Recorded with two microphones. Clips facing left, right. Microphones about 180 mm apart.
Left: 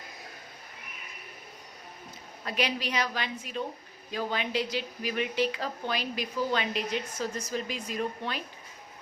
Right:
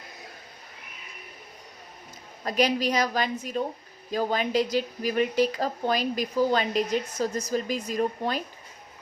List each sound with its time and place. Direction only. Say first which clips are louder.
2.4 s speech: right 7 dB; 40° right (ahead or behind)